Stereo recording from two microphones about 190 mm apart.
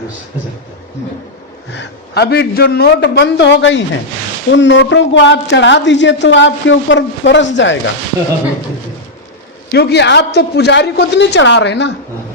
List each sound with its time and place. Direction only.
1.7 s a woman's voice: 60° left (ahead or behind)
9.7 s a woman's voice: 60° left (ahead or behind)